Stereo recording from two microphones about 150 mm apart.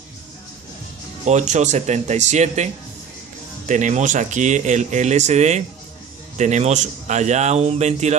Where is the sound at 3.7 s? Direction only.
55° right (ahead or behind).